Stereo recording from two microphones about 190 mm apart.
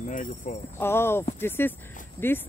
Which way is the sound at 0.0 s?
45° left (ahead or behind).